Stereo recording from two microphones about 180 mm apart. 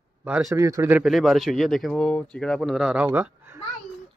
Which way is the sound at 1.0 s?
Centre (ahead or behind).